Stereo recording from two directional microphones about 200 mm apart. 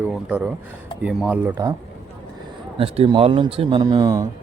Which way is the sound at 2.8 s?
30° right (ahead or behind).